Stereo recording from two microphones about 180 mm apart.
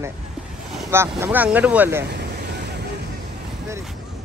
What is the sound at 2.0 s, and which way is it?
Vehicle, 65° right (ahead or behind).